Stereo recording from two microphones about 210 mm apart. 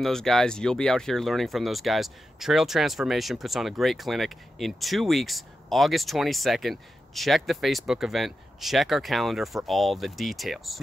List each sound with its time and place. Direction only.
0.0 s speech: centre (ahead or behind)